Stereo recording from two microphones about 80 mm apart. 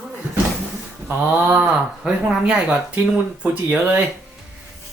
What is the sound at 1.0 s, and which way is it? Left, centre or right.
A man's voice, centre.